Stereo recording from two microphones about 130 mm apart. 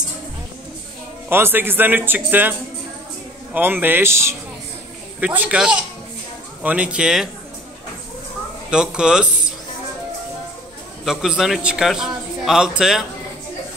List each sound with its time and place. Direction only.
1.3 s a man's voice: 15° right (ahead or behind)
3.5 s a man's voice: 15° right (ahead or behind)
8.6 s a man's voice: 5° right (ahead or behind)
11.1 s a man's voice: 5° right (ahead or behind)